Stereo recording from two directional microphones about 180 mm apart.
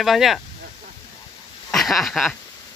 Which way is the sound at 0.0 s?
Centre (ahead or behind).